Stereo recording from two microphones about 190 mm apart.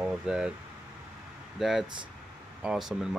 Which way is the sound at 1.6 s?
Centre (ahead or behind).